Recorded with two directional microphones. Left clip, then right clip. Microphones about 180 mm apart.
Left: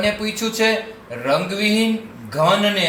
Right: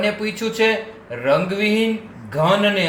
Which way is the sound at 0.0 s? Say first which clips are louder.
Left 1 dB; 45° right (ahead or behind).